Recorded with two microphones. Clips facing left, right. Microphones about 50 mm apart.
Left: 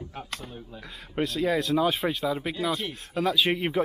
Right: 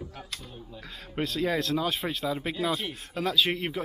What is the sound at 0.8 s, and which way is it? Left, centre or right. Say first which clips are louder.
Speech: left 3 dB; centre.